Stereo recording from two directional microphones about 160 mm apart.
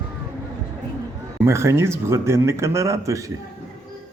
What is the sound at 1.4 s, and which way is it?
Speech, 15° right (ahead or behind).